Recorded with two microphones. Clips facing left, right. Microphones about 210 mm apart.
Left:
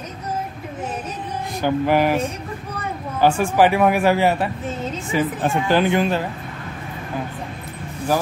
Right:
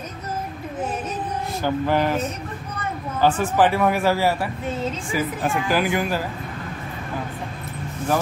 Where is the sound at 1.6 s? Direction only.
10° left (ahead or behind).